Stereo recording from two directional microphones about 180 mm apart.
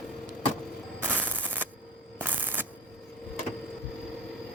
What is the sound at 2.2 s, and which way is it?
Shuffling cards, 10° right (ahead or behind).